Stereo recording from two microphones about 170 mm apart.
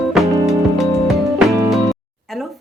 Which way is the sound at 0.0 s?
Centre (ahead or behind).